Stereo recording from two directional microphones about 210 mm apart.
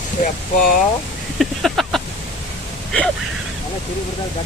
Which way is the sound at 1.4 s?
Centre (ahead or behind).